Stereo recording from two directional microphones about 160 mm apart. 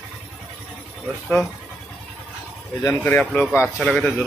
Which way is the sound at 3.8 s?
5° left (ahead or behind).